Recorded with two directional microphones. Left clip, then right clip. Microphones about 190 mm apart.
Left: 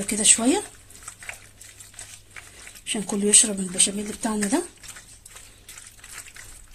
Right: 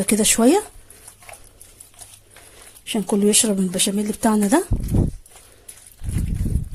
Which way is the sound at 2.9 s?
35° right (ahead or behind).